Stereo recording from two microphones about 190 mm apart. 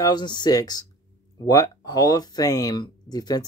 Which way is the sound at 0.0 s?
20° left (ahead or behind).